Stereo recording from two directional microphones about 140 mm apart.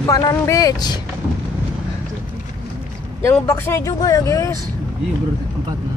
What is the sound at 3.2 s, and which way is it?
Speech, 20° left (ahead or behind).